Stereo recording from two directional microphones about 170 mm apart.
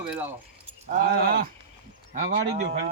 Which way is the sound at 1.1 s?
70° right (ahead or behind).